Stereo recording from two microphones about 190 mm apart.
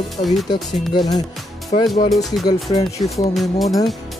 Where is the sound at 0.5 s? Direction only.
20° left (ahead or behind).